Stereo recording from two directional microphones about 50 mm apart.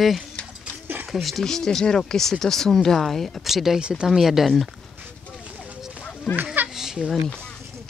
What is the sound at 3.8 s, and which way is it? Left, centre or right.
Speech, centre.